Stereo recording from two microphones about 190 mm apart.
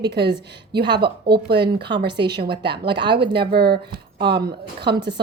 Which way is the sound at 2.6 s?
60° right (ahead or behind).